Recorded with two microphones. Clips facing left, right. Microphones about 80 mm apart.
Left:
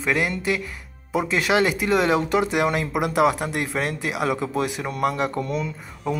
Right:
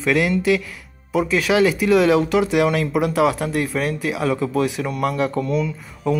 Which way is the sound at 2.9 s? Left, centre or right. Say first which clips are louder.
Even; left.